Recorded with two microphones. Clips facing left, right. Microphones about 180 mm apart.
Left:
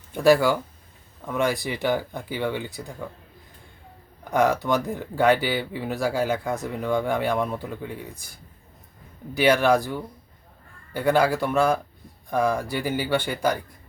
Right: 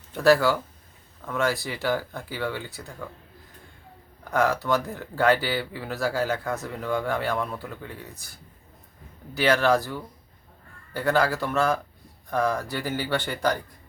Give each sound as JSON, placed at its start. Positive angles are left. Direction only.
{"t": 0.1, "sound": "speech", "side_deg": 15}
{"t": 4.2, "sound": "speech", "side_deg": 15}
{"t": 9.3, "sound": "speech", "side_deg": 15}